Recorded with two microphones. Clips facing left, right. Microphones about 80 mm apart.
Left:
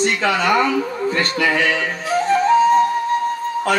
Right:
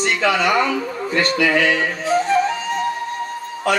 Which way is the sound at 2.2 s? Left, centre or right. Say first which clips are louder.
Left 5 dB; left.